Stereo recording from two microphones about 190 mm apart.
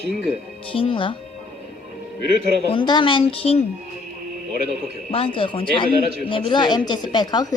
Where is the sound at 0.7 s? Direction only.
30° left (ahead or behind).